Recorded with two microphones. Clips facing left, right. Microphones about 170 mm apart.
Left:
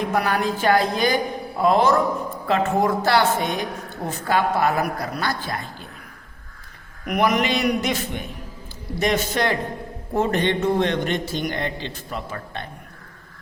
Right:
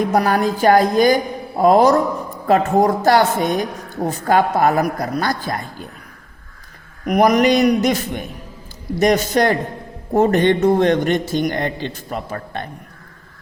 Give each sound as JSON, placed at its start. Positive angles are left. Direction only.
{"t": 0.1, "sound": "speech", "side_deg": -40}
{"t": 7.0, "sound": "a man's voice", "side_deg": -40}